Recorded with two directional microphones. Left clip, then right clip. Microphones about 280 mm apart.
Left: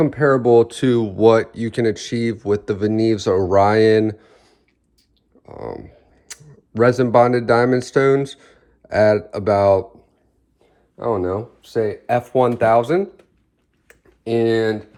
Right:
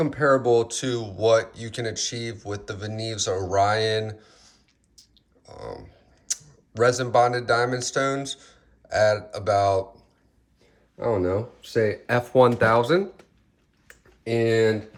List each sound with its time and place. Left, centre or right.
0.0 s speech: left
11.0 s speech: centre
11.8 s speech: centre
13.8 s a sound: left